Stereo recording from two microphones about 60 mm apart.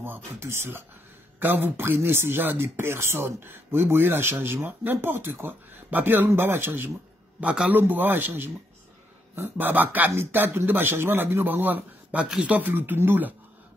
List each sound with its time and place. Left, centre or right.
0.4 s speech: right
1.4 s speech: right
7.3 s speech: right